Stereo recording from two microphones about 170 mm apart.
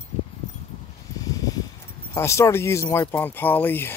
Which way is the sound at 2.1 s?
15° left (ahead or behind).